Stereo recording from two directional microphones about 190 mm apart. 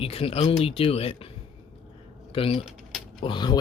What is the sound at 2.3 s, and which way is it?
Speech, 30° left (ahead or behind).